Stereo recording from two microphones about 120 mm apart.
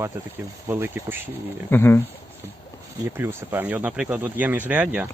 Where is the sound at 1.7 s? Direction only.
20° left (ahead or behind).